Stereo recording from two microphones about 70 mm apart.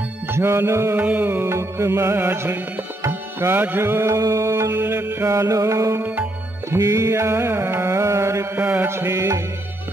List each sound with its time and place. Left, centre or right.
0.3 s music: right
0.9 s music: right
1.5 s music: right
4.2 s music: right
4.6 s music: right
5.9 s music: right
6.8 s music: right
8.5 s music: right
8.8 s music: right